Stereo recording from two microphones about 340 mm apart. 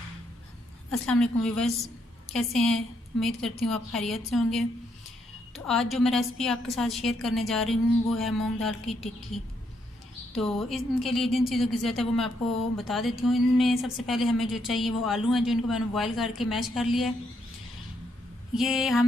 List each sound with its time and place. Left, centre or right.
0.9 s speech: centre
18.5 s speech: centre